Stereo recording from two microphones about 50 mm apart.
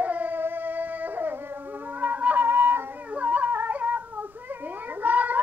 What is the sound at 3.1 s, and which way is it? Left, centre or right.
Cat, right.